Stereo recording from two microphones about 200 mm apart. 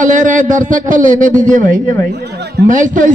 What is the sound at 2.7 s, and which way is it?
Speech, 40° right (ahead or behind).